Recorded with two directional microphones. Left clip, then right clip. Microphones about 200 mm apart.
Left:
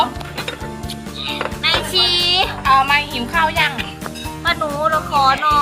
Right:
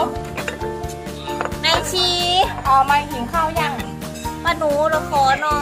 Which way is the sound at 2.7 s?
40° right (ahead or behind).